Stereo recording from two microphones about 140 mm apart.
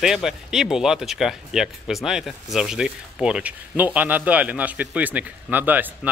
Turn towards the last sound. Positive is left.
turn(degrees=-15)  # may be behind; listen again after turning